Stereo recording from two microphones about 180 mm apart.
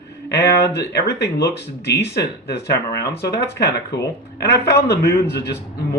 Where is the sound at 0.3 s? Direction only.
70° left (ahead or behind).